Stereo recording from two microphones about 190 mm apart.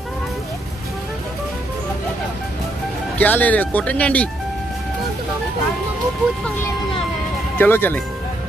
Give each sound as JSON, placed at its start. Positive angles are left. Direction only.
{"t": 3.2, "sound": "speech", "side_deg": 10}
{"t": 7.5, "sound": "speech", "side_deg": 10}